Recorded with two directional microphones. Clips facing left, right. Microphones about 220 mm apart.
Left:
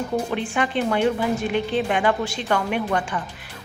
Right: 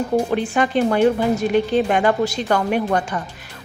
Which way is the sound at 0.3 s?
40° right (ahead or behind).